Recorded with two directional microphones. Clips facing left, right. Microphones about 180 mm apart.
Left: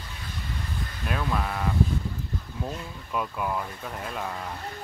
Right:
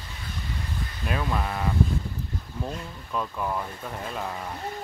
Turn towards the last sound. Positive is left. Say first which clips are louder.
# right 1 dB
turn(degrees=-5)  # may be behind; listen again after turning